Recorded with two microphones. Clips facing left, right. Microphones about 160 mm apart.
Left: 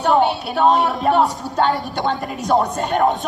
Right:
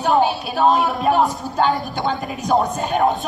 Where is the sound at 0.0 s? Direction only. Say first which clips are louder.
Left 1 dB; 20° left (ahead or behind).